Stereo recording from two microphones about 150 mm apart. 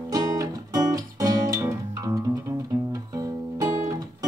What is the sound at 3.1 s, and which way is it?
Music, 25° right (ahead or behind).